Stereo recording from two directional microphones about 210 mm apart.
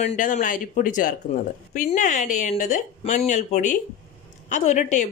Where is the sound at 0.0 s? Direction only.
35° left (ahead or behind).